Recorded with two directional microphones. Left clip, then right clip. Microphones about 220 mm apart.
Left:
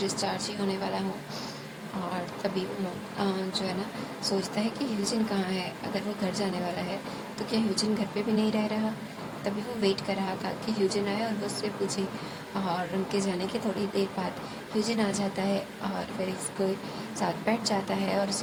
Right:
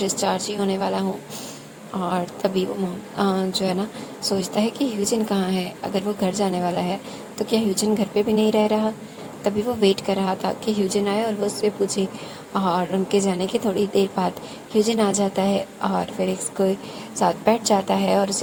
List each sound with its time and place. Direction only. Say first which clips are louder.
0.0 s a woman's voice: right 8 dB; 35° right (ahead or behind)
2.1 s a woman's voice: right 9 dB; 35° right (ahead or behind)